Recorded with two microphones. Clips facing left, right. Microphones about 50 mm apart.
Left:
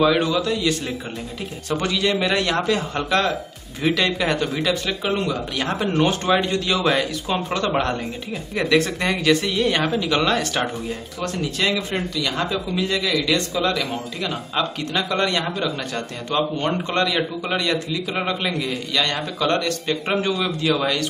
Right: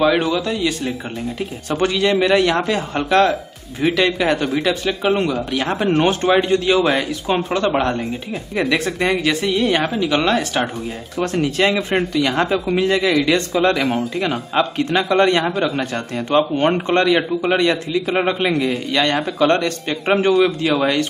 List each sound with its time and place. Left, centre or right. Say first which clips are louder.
0.0 s a man's voice: right 2 dB; centre
2.0 s speech: right 6 dB; centre
3.8 s speech: right 4 dB; centre
5.9 s a man's voice: right 4 dB; right
6.2 s a man's voice: right 5 dB; centre
11.5 s a man's voice: right 5 dB; right